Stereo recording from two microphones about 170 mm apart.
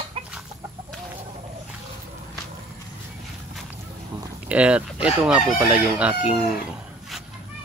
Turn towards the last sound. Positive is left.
turn(degrees=-5)  # may be behind; listen again after turning